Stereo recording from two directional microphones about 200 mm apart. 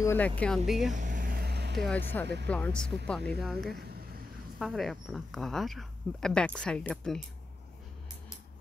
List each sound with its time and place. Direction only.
0.0 s speech: 10° left (ahead or behind)
0.7 s speech: centre (ahead or behind)
0.9 s vehicle: 40° right (ahead or behind); by 1.9 s 55° right (ahead or behind)
1.9 s speech: 10° left (ahead or behind)